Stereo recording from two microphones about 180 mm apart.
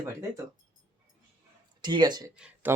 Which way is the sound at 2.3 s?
5° right (ahead or behind).